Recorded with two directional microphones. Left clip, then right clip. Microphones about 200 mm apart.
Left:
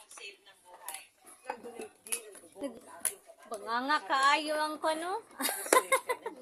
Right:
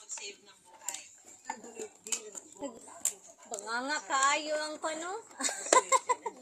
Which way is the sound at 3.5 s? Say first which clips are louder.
Left 3 dB; 10° left (ahead or behind).